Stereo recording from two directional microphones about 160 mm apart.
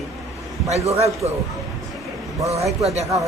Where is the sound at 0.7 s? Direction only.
40° right (ahead or behind).